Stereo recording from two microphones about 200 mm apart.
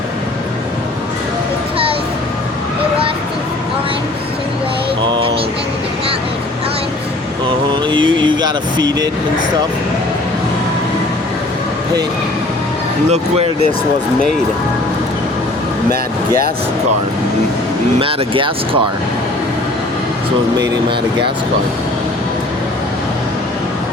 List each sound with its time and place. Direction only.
5.0 s music: 25° right (ahead or behind)
7.9 s a sound: 25° right (ahead or behind)
13.1 s speech: 30° right (ahead or behind)
18.0 s speech: 25° right (ahead or behind)